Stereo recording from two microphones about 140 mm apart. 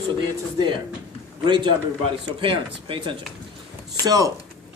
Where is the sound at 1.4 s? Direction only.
35° right (ahead or behind).